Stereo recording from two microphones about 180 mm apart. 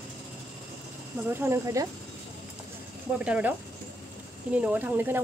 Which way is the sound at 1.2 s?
15° right (ahead or behind).